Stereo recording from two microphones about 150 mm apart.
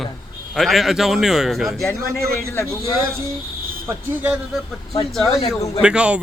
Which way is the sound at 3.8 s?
15° right (ahead or behind).